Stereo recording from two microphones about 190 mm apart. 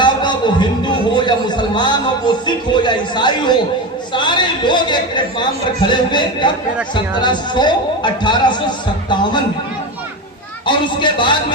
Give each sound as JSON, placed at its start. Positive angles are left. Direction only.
{"t": 0.0, "sound": "a sound", "side_deg": 25}
{"t": 4.1, "sound": "a man's voice", "side_deg": 25}
{"t": 10.7, "sound": "a man's voice", "side_deg": 25}